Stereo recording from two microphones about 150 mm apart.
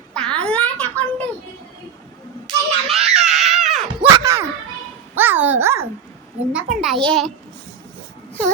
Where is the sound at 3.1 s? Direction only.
50° right (ahead or behind).